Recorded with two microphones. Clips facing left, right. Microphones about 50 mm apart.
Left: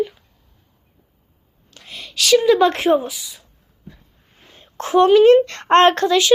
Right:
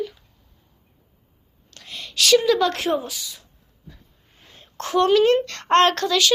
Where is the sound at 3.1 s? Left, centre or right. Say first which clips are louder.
Left 1 dB; centre.